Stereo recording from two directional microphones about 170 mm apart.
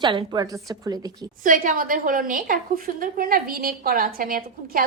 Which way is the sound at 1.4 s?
50° right (ahead or behind).